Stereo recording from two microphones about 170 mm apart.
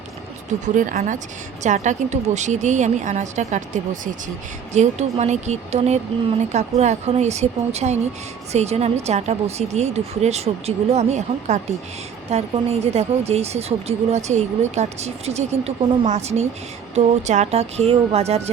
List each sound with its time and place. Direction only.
0.6 s a woman's voice: 50° right (ahead or behind)